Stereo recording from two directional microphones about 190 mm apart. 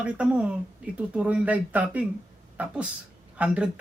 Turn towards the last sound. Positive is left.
turn(degrees=-5)  # may be behind; listen again after turning